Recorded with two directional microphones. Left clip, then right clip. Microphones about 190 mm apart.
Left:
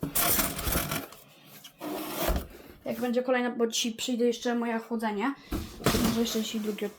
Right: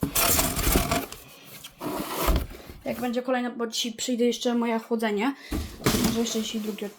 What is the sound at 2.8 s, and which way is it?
Speech, 5° right (ahead or behind).